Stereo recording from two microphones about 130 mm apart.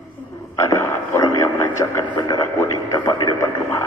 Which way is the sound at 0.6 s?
20° left (ahead or behind).